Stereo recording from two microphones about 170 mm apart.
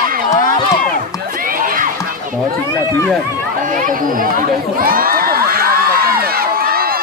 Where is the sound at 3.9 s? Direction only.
55° right (ahead or behind).